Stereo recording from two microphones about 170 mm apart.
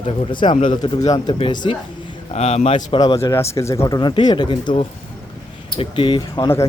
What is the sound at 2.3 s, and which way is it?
Speech, 40° left (ahead or behind).